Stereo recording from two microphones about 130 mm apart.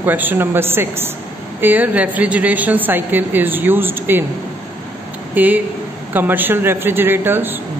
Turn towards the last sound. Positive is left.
turn(degrees=-15)  # may be behind; listen again after turning